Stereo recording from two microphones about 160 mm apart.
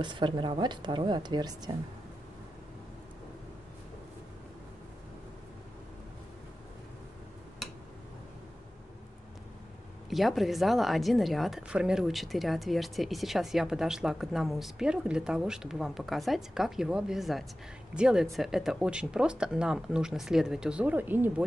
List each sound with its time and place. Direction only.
0.0 s a woman's voice: 30° right (ahead or behind)
10.0 s speech: centre (ahead or behind)